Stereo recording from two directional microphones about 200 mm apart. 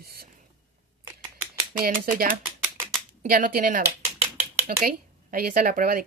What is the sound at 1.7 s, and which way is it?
Speech, 45° right (ahead or behind).